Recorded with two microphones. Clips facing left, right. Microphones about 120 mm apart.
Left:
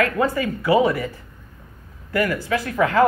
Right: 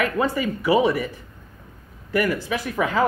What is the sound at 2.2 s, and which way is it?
Speech, 15° right (ahead or behind).